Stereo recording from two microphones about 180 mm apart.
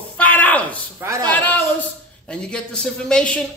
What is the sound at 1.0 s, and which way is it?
Speech, 15° right (ahead or behind).